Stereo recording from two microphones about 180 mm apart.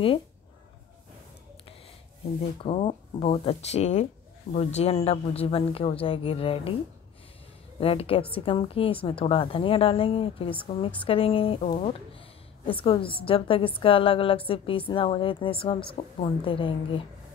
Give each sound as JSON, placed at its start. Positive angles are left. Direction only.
{"t": 2.6, "sound": "speech", "side_deg": 30}
{"t": 7.8, "sound": "a woman's voice", "side_deg": 30}